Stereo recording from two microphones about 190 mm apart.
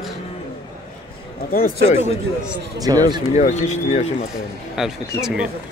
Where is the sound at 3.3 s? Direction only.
35° left (ahead or behind).